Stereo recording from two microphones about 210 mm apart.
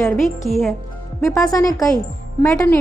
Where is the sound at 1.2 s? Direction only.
15° left (ahead or behind).